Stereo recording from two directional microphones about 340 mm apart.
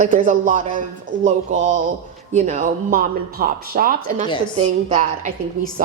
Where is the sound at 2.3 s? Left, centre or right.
Right.